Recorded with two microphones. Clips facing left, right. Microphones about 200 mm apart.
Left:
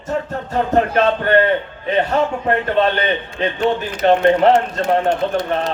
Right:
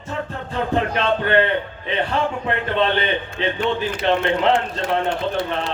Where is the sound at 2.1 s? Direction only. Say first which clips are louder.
Left 5 dB; 45° left (ahead or behind).